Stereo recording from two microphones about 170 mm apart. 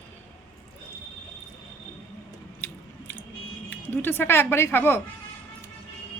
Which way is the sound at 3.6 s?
10° left (ahead or behind).